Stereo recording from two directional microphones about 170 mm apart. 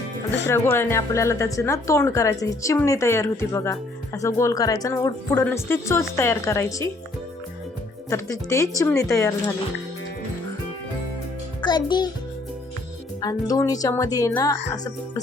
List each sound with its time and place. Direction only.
0.4 s speech: 15° left (ahead or behind)
8.1 s speech: 20° left (ahead or behind)
11.6 s a child's voice: 25° left (ahead or behind)
13.2 s speech: 20° left (ahead or behind)